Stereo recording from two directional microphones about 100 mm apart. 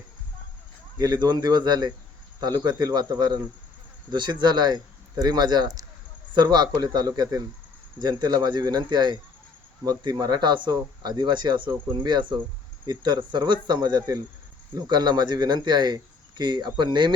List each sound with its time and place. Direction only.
0.9 s speech: 40° right (ahead or behind)